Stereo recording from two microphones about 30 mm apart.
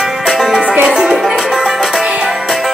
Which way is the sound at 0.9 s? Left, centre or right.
Right.